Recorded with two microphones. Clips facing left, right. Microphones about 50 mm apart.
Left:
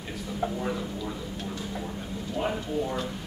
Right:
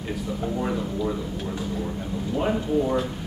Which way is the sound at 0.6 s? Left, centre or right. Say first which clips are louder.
Right 5 dB; centre.